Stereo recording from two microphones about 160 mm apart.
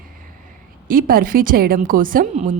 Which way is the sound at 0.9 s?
65° right (ahead or behind).